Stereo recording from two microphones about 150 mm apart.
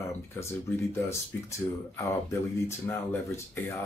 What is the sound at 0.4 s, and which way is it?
Speech, 20° left (ahead or behind).